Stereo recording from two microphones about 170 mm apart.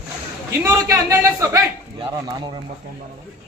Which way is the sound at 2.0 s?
30° right (ahead or behind).